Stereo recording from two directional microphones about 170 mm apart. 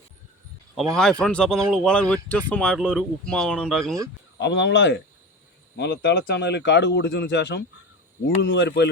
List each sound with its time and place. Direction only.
0.9 s speech: 5° left (ahead or behind)
4.4 s speech: 90° left